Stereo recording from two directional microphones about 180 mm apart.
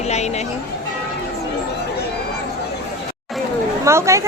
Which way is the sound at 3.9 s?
15° right (ahead or behind).